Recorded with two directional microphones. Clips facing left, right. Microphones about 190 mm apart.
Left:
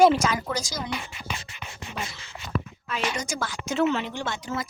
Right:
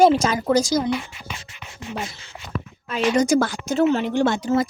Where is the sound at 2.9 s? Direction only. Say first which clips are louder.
Right 12 dB; 35° right (ahead or behind).